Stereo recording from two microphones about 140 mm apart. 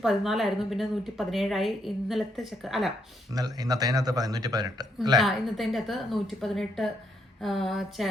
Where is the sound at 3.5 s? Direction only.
25° right (ahead or behind).